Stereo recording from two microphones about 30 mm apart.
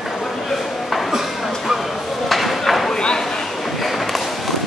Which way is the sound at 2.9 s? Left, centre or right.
Left.